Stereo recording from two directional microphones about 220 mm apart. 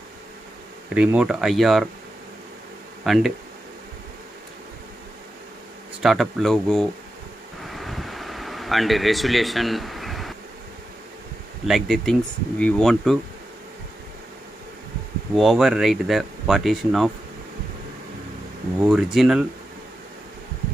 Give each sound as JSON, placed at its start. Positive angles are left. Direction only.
{"t": 0.9, "sound": "speech", "side_deg": -5}
{"t": 3.0, "sound": "speech", "side_deg": 0}
{"t": 6.0, "sound": "speech", "side_deg": 0}
{"t": 7.6, "sound": "air conditioning", "side_deg": 0}
{"t": 11.6, "sound": "speech", "side_deg": 0}
{"t": 15.3, "sound": "speech", "side_deg": 0}
{"t": 18.8, "sound": "speech", "side_deg": -5}